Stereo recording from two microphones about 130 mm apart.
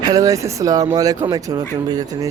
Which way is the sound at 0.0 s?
25° right (ahead or behind).